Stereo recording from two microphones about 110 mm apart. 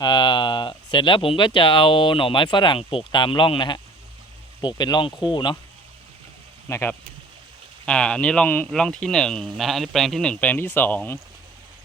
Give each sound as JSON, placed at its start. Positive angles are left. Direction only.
{"t": 0.0, "sound": "speech", "side_deg": 45}
{"t": 6.7, "sound": "speech", "side_deg": 25}
{"t": 7.9, "sound": "a man's voice", "side_deg": 10}